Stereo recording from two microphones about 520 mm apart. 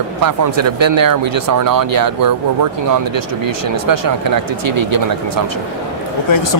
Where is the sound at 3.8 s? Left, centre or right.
Right.